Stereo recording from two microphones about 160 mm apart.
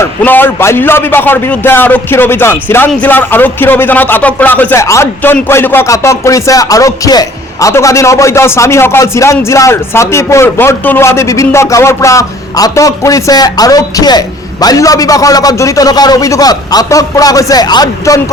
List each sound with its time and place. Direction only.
0.0 s a man's voice: 10° left (ahead or behind)